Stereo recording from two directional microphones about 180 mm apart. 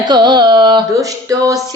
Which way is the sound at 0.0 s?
25° right (ahead or behind).